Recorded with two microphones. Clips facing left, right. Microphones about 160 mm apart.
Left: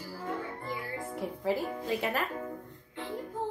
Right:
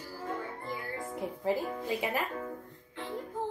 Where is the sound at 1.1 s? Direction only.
15° right (ahead or behind).